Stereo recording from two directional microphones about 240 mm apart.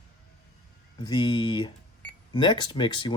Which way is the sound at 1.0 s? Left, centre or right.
Centre.